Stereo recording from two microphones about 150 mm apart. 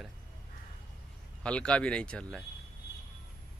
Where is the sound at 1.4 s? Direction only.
5° left (ahead or behind).